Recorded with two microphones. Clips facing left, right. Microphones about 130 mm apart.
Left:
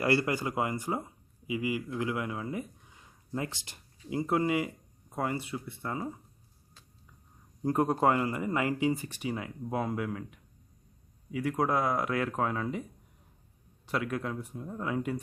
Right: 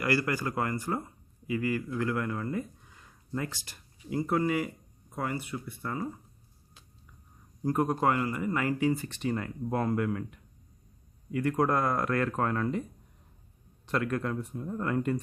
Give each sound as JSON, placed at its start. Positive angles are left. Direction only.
{"t": 0.0, "sound": "speech", "side_deg": 25}
{"t": 7.6, "sound": "speech", "side_deg": 25}
{"t": 13.8, "sound": "speech", "side_deg": 5}